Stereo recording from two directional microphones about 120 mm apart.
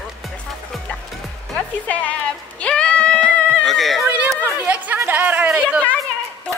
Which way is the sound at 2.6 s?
10° left (ahead or behind).